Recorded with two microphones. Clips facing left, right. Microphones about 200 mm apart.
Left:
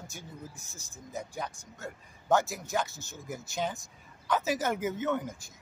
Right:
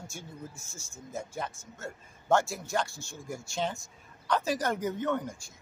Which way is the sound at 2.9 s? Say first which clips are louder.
Right 1 dB; 20° left (ahead or behind).